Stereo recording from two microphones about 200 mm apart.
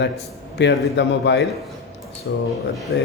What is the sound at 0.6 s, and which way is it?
A man's voice, 60° left (ahead or behind).